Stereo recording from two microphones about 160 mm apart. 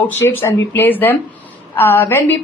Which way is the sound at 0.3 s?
15° left (ahead or behind).